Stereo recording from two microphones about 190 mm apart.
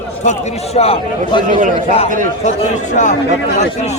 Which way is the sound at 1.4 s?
45° right (ahead or behind).